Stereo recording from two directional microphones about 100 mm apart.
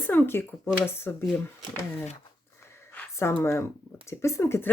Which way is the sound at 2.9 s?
20° left (ahead or behind).